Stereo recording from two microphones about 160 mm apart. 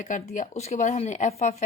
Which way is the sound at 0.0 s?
55° left (ahead or behind).